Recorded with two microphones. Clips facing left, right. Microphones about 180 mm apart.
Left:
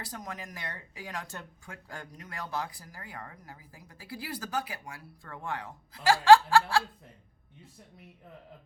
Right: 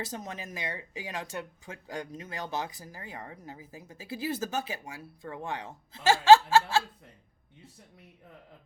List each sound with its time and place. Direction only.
0.0 s speech: 25° right (ahead or behind)